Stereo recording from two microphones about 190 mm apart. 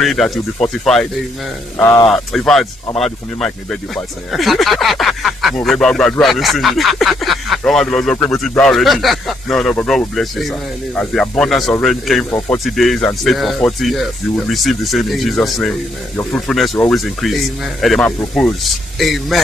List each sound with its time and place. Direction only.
0.0 s speech: centre (ahead or behind)
12.3 s speech: 15° left (ahead or behind)
12.7 s speech: centre (ahead or behind)